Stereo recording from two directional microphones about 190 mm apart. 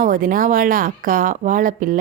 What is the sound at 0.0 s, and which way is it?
Speech, 45° right (ahead or behind).